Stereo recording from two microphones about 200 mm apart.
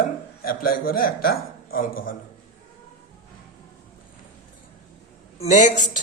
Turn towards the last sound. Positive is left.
turn(degrees=40)  # may be behind; listen again after turning